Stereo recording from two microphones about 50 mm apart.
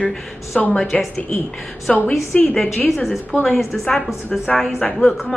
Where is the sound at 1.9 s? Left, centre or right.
Centre.